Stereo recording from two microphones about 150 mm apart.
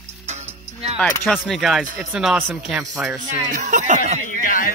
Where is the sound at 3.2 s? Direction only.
55° right (ahead or behind).